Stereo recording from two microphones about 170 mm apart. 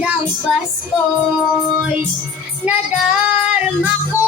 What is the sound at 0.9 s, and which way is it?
Female singing, 5° right (ahead or behind).